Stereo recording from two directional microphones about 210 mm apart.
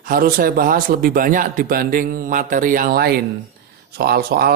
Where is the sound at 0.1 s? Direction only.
45° right (ahead or behind).